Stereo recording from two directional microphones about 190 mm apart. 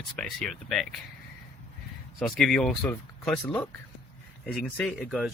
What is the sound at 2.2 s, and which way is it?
Speech, centre (ahead or behind).